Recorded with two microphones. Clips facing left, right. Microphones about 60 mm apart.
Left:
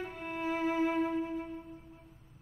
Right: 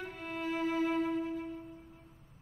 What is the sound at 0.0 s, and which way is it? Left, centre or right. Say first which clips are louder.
Music: left 2 dB; left.